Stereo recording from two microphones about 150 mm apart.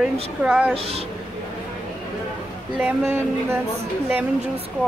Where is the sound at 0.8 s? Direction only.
40° right (ahead or behind).